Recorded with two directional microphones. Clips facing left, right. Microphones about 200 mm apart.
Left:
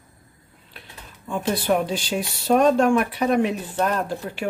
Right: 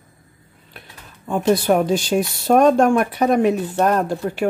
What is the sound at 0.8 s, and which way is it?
Speech, 45° right (ahead or behind).